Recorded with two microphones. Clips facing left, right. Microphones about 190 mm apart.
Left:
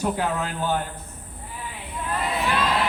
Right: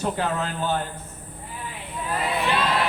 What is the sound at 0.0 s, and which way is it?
Speech, 10° left (ahead or behind).